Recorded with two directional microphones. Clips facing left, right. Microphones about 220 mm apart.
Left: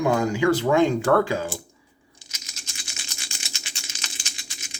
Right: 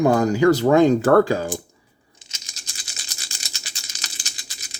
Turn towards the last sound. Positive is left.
turn(degrees=-35)  # may be behind; listen again after turning